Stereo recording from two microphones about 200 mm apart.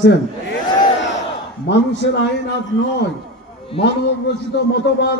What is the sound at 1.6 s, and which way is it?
Speech, 60° left (ahead or behind).